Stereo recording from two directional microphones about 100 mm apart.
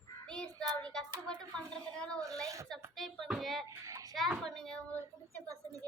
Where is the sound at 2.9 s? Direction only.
Centre (ahead or behind).